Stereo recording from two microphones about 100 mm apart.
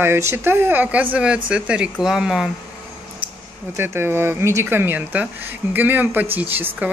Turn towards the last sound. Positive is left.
turn(degrees=-20)  # may be behind; listen again after turning